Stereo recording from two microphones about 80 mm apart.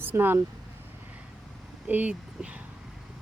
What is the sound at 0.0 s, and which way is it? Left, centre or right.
Speech, right.